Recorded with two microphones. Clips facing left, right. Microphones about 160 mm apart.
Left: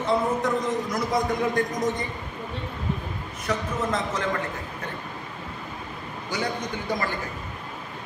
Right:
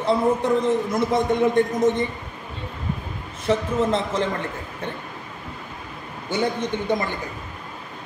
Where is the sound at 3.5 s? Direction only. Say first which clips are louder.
Right 6 dB; 30° right (ahead or behind).